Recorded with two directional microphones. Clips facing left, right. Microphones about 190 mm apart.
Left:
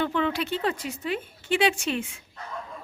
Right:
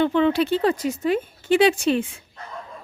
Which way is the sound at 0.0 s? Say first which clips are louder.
Right 7 dB; 25° right (ahead or behind).